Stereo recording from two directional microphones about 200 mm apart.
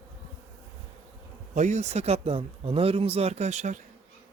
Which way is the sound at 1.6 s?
35° right (ahead or behind).